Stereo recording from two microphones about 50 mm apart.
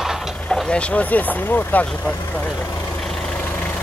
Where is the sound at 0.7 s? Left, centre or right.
Left.